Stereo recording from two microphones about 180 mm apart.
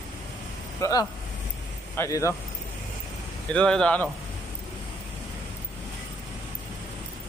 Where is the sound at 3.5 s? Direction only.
5° left (ahead or behind).